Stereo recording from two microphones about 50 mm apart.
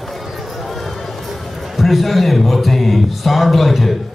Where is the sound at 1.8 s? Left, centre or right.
Centre.